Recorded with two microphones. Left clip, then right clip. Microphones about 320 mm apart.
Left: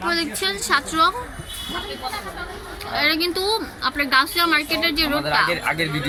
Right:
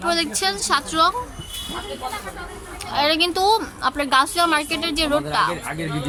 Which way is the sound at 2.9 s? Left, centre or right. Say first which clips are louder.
Right 1 dB; centre.